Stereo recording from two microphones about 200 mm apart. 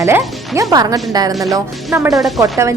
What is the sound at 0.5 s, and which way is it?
Speech, 15° right (ahead or behind).